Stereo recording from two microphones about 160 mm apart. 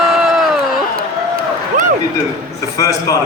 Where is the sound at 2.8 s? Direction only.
20° left (ahead or behind).